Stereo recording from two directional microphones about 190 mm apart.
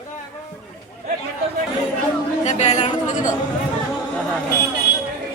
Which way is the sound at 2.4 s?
35° left (ahead or behind).